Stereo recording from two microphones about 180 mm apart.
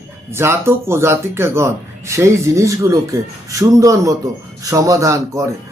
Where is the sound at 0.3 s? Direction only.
15° right (ahead or behind).